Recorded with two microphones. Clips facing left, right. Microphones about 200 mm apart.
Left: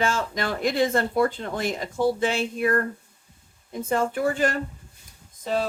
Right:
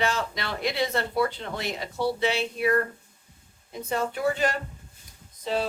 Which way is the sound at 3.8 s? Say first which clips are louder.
Left 3 dB; 50° left (ahead or behind).